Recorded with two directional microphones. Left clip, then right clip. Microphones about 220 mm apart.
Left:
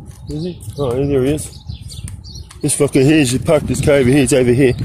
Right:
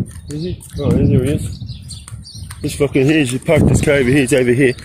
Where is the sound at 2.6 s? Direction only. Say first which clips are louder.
Left 2 dB; 30° left (ahead or behind).